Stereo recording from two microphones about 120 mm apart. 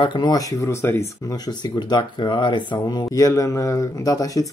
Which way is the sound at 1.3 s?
35° left (ahead or behind).